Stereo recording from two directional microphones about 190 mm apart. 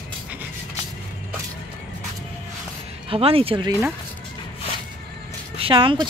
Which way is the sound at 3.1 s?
30° right (ahead or behind).